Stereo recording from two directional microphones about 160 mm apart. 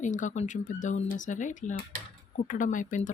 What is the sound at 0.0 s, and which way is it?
Speech, 50° left (ahead or behind).